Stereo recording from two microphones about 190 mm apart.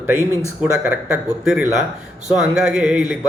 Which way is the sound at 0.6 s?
5° right (ahead or behind).